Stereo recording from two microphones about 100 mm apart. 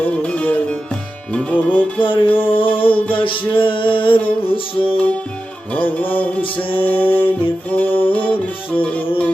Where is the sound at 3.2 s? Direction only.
60° left (ahead or behind).